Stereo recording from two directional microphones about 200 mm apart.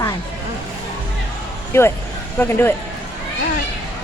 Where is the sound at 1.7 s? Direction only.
10° left (ahead or behind).